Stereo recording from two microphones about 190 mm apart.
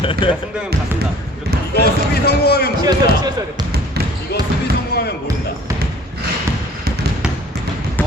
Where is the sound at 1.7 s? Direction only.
55° left (ahead or behind).